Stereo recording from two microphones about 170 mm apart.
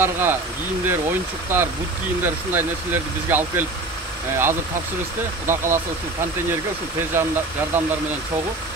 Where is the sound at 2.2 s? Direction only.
10° right (ahead or behind).